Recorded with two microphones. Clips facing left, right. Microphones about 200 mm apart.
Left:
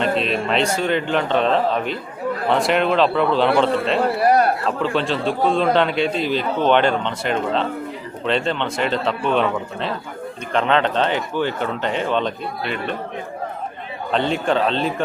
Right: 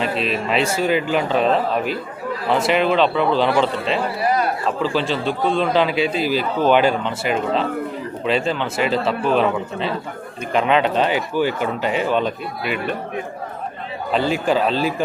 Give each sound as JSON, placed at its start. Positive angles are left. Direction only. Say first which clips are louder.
{"t": 0.0, "sound": "a man's voice", "louder": "left 2 dB", "side_deg": 0}
{"t": 4.2, "sound": "a sound", "louder": "left 5 dB", "side_deg": 60}
{"t": 4.8, "sound": "a man's voice", "louder": "even", "side_deg": 0}
{"t": 14.1, "sound": "a man's voice", "louder": "right 1 dB", "side_deg": -5}